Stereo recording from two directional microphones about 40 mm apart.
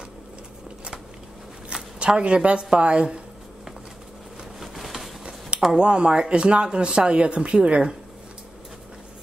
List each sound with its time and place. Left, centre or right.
1.7 s speech: right
4.6 s a sound: centre
5.6 s speech: centre